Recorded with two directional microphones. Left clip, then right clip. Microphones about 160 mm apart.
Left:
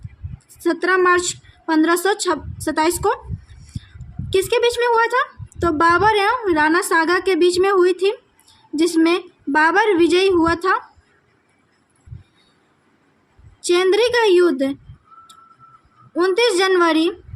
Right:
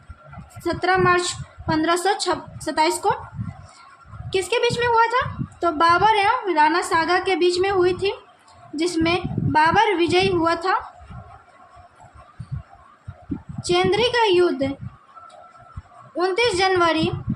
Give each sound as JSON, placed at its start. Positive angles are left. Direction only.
{"t": 0.6, "sound": "a woman's voice", "side_deg": 40}
{"t": 4.3, "sound": "a woman's voice", "side_deg": 40}
{"t": 13.6, "sound": "a woman's voice", "side_deg": 40}
{"t": 16.1, "sound": "a woman's voice", "side_deg": 40}